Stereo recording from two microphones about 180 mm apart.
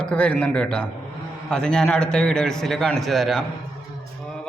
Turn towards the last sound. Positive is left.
turn(degrees=5)  # may be behind; listen again after turning